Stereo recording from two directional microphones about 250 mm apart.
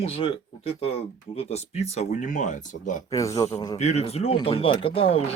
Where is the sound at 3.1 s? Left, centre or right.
Centre.